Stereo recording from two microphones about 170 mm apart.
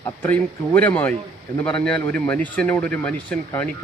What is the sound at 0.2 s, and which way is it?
A man's voice, 10° left (ahead or behind).